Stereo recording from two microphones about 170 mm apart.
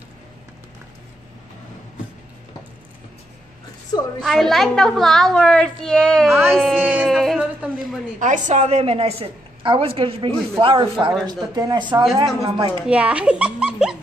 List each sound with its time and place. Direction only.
4.2 s a woman's voice: centre (ahead or behind)
6.8 s music: 10° right (ahead or behind)
8.2 s a woman's voice: 45° right (ahead or behind); by 12.7 s 30° right (ahead or behind)
12.8 s speech: 5° right (ahead or behind)